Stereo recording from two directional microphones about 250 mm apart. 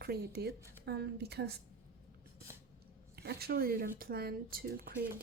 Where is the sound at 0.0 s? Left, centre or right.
Right.